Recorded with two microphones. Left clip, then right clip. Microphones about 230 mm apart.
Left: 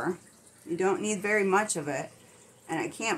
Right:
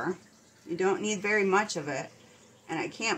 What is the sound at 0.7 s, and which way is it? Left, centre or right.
A woman's voice, centre.